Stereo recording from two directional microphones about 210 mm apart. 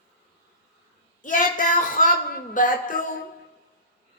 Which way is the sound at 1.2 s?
40° left (ahead or behind).